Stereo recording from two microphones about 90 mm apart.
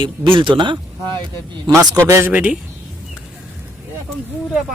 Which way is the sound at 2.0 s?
30° right (ahead or behind).